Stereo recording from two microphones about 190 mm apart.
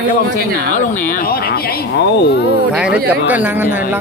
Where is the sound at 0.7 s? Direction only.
45° left (ahead or behind).